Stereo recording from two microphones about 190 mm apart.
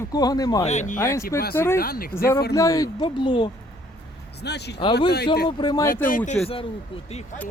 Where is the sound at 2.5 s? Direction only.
15° left (ahead or behind).